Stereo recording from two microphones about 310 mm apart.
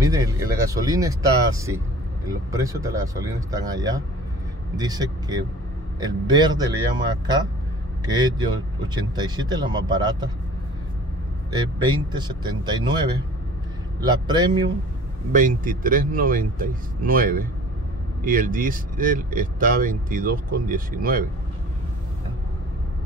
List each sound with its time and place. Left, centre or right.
0.0 s speech: centre
8.1 s speech: centre
11.5 s speech: centre
14.0 s speech: centre
15.3 s speech: right